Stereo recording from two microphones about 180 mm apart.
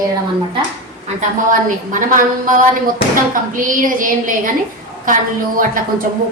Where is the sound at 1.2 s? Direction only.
45° right (ahead or behind).